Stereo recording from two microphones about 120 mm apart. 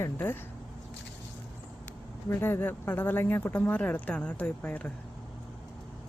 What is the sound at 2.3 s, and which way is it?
Speech, 20° left (ahead or behind).